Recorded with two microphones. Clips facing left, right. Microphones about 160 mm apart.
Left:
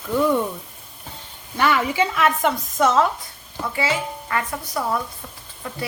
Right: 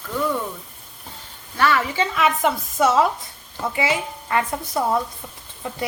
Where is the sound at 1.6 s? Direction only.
15° left (ahead or behind).